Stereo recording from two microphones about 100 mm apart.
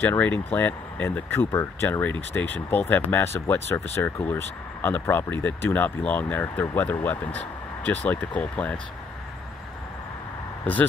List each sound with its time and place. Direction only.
0.0 s speech: 15° left (ahead or behind)
10.6 s speech: 15° left (ahead or behind)